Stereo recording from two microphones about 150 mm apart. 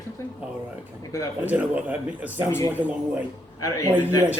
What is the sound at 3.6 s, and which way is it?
Speech, 20° left (ahead or behind).